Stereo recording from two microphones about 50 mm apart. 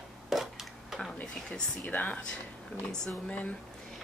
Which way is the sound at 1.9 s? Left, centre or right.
Left.